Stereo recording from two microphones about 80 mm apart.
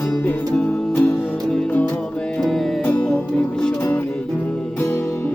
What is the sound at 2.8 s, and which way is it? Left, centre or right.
Music, left.